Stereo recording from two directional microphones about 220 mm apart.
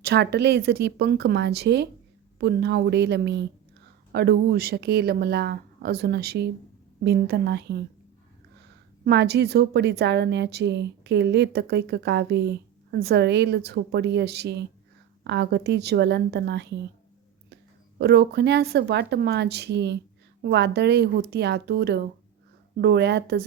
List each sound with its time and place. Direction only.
0.0 s a woman's voice: 50° right (ahead or behind)
9.0 s a woman's voice: 50° right (ahead or behind)